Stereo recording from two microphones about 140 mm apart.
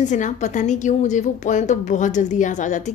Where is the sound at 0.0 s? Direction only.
60° left (ahead or behind).